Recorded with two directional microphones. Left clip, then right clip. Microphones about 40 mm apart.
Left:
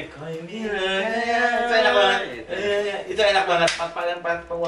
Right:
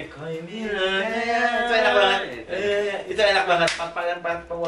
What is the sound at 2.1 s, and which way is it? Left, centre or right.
A man's voice, right.